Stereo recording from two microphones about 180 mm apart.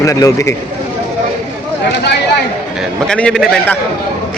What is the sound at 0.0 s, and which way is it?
Speech, 20° left (ahead or behind).